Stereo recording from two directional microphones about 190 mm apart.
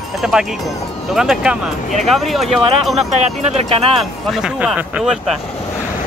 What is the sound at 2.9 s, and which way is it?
Speech, 35° right (ahead or behind).